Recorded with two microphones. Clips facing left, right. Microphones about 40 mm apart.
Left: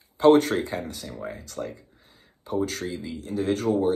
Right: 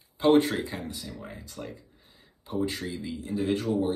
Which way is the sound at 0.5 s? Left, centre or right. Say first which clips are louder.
Left 5 dB; left.